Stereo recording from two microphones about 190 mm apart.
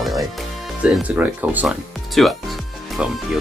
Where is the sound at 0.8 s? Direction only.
5° right (ahead or behind).